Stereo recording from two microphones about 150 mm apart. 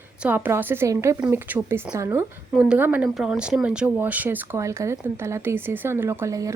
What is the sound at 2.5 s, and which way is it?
Speech, 5° right (ahead or behind).